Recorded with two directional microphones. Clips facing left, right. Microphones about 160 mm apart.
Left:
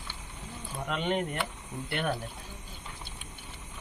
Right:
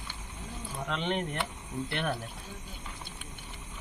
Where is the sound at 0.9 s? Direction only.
10° left (ahead or behind).